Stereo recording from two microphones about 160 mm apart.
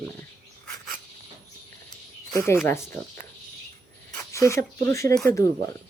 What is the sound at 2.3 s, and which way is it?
Speech, 15° left (ahead or behind).